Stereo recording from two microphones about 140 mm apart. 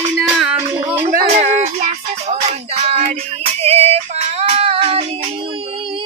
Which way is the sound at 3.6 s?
50° right (ahead or behind).